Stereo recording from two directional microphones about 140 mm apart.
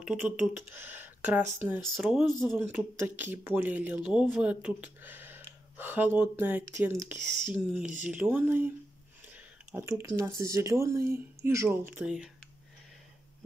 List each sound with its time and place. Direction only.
0.0 s speech: 5° right (ahead or behind)
2.5 s speech: 15° right (ahead or behind)
7.5 s speech: 5° right (ahead or behind)